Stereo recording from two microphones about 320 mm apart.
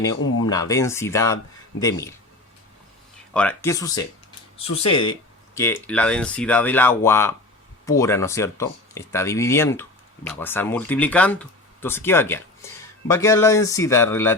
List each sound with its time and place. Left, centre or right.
0.2 s speech: left
0.4 s speech: centre
3.3 s speech: centre